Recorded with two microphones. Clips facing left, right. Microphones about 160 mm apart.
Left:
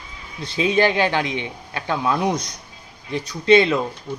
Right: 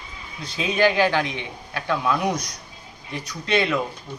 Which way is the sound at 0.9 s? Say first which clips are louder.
Even; 20° left (ahead or behind).